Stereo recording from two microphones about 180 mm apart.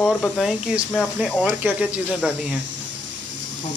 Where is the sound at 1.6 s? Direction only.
5° right (ahead or behind).